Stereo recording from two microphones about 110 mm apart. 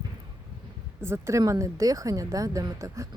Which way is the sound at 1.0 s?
25° right (ahead or behind).